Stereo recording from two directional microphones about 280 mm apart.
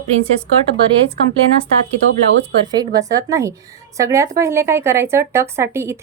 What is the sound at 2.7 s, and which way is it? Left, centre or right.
Speech, centre.